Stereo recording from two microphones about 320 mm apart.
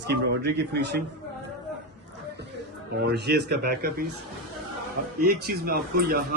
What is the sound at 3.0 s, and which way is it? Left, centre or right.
Speech, right.